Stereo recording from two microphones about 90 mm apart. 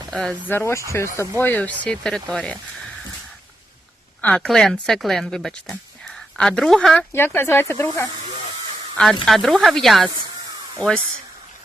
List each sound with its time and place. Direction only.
0.1 s speech: 5° left (ahead or behind)
0.4 s speech: 25° left (ahead or behind)
1.4 s speech: 20° left (ahead or behind)
4.2 s speech: 15° left (ahead or behind)
7.1 s speech: 25° left (ahead or behind)
9.2 s speech: centre (ahead or behind)